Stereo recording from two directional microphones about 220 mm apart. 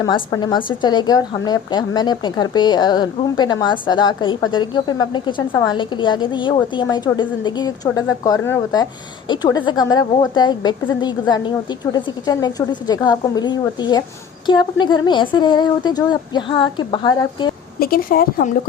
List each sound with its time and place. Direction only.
0.0 s a woman's voice: 15° left (ahead or behind)
17.7 s speech: 40° left (ahead or behind)